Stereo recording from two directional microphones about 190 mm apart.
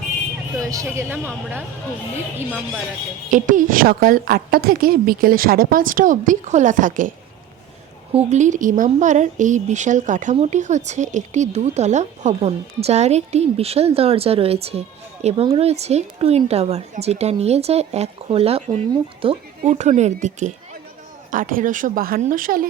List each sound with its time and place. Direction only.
0.6 s speech: 15° right (ahead or behind)
3.2 s a woman's voice: 40° right (ahead or behind)
8.1 s a woman's voice: 35° right (ahead or behind)